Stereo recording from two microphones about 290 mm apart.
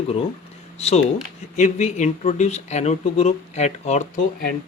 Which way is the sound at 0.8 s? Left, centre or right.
Left.